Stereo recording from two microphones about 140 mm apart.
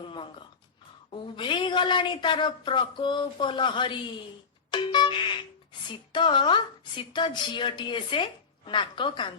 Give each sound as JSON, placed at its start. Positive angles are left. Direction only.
{"t": 1.1, "sound": "a woman's voice", "side_deg": 35}